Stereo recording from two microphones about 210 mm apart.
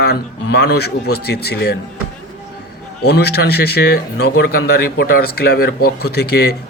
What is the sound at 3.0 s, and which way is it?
Speech, 50° left (ahead or behind).